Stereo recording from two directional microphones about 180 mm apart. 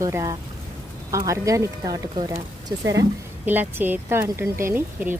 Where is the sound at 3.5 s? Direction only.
10° right (ahead or behind).